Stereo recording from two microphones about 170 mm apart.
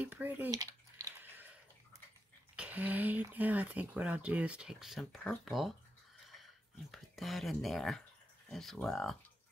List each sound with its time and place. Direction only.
0.0 s speech: 10° right (ahead or behind)
0.5 s a sound: 20° right (ahead or behind)
2.5 s speech: 10° right (ahead or behind)
6.9 s speech: centre (ahead or behind)